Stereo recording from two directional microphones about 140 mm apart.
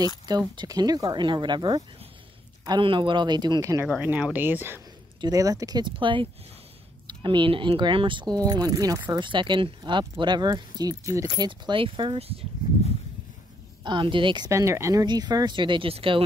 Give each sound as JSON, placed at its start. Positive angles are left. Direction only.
{"t": 0.3, "sound": "speech", "side_deg": -30}
{"t": 3.8, "sound": "speech", "side_deg": -10}
{"t": 5.2, "sound": "speech", "side_deg": -25}
{"t": 13.8, "sound": "speech", "side_deg": -35}
{"t": 14.5, "sound": "speech", "side_deg": -20}